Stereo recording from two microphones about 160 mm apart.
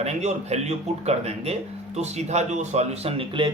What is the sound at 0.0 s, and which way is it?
Speech, 45° right (ahead or behind).